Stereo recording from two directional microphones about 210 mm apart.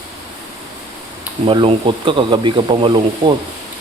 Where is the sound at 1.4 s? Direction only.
25° right (ahead or behind).